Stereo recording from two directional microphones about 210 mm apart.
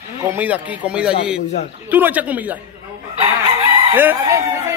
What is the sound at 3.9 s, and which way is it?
Speech, 10° right (ahead or behind).